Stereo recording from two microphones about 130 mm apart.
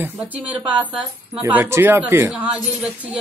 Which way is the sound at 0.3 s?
10° right (ahead or behind).